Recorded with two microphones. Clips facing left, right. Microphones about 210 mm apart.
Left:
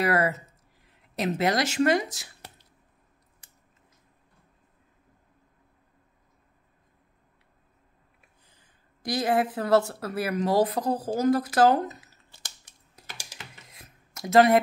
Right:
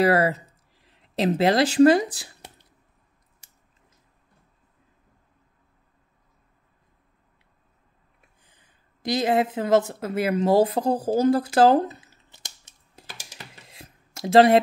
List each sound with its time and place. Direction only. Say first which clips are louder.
0.0 s speech: right 5 dB; 30° right (ahead or behind)
8.5 s speech: even; 20° right (ahead or behind)
13.4 s a sound: right 3 dB; 30° right (ahead or behind)